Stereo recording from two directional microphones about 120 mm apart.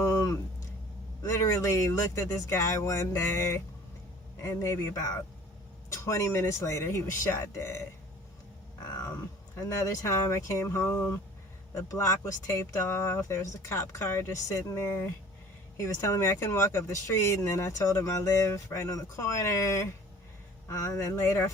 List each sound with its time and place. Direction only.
0.0 s a sound: 25° left (ahead or behind)
1.2 s speech: 25° left (ahead or behind)
5.9 s speech: 25° left (ahead or behind)
9.6 s speech: 25° left (ahead or behind)